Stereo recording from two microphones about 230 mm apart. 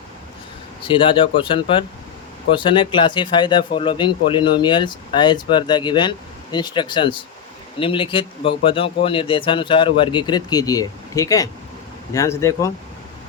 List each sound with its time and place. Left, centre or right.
0.9 s a man's voice: left